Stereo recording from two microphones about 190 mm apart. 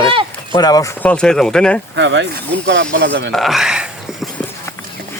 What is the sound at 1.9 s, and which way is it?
Speech, 70° right (ahead or behind).